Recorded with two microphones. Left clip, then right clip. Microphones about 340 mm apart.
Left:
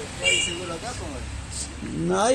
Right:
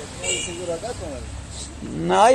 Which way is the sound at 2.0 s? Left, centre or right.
Right.